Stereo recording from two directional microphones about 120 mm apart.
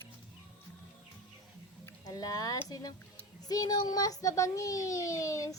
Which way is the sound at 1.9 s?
30° left (ahead or behind).